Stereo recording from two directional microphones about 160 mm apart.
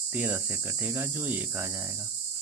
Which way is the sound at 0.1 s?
10° right (ahead or behind).